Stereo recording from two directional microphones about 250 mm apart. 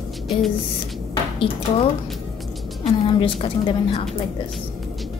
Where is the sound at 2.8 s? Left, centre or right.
Left.